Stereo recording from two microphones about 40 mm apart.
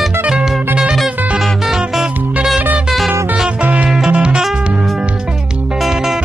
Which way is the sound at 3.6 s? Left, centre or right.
Right.